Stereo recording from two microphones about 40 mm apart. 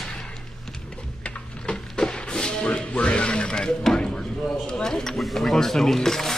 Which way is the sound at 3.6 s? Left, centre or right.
Centre.